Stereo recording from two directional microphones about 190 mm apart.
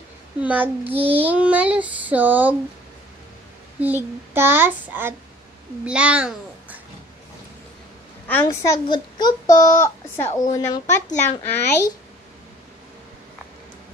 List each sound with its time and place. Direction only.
0.4 s child singing: 10° right (ahead or behind)
0.9 s child singing: 30° right (ahead or behind)
1.2 s child singing: 5° right (ahead or behind)
3.8 s child singing: 10° right (ahead or behind)
5.9 s a child's voice: 5° right (ahead or behind)
8.3 s a woman's voice: 10° left (ahead or behind)
10.2 s speech: 40° left (ahead or behind)
10.5 s a woman's voice: 15° left (ahead or behind)